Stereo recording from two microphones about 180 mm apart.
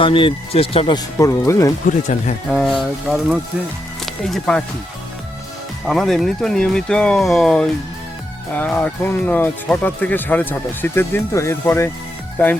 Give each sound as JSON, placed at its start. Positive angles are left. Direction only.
{"t": 0.0, "sound": "speech", "side_deg": 30}
{"t": 2.5, "sound": "speech", "side_deg": 0}
{"t": 5.8, "sound": "speech", "side_deg": 0}